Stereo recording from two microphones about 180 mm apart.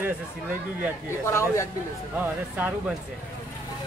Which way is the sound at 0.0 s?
10° right (ahead or behind).